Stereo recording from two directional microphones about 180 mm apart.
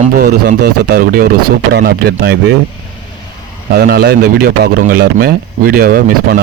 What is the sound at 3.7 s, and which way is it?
A man's voice, 60° right (ahead or behind).